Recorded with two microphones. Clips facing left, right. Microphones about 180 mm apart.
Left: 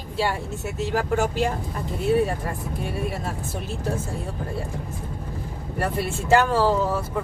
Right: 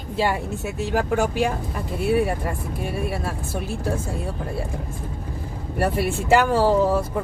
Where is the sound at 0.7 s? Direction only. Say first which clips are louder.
Right 1 dB; 15° right (ahead or behind).